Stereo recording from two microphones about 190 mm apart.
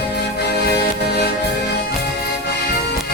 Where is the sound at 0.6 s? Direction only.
60° left (ahead or behind).